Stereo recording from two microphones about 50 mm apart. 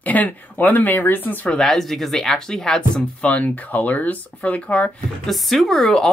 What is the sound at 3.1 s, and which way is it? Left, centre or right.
Speech, left.